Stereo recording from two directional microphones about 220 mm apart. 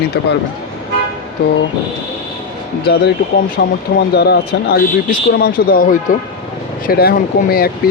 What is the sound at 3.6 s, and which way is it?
Speech, 50° left (ahead or behind).